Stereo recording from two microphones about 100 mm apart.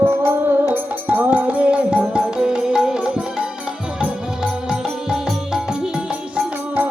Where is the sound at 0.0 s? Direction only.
25° right (ahead or behind); by 3.4 s 5° right (ahead or behind).